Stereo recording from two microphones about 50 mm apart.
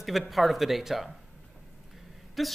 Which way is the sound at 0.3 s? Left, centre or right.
Centre.